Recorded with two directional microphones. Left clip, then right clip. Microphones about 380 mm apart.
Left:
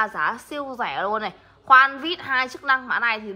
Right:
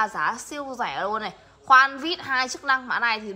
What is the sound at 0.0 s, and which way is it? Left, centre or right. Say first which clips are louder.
A woman's voice: left 1 dB; centre.